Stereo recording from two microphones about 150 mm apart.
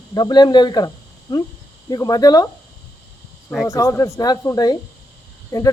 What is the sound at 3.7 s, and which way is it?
Speech, 20° left (ahead or behind).